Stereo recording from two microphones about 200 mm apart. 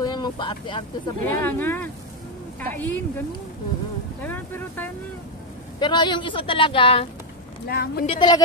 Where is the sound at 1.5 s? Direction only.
10° left (ahead or behind).